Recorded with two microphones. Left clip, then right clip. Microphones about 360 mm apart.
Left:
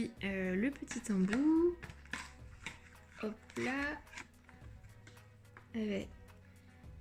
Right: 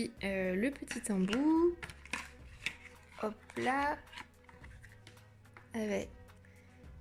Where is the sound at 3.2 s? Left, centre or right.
Right.